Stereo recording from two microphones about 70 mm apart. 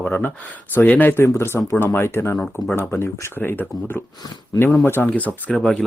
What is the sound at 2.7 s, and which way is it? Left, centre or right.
Speech, left.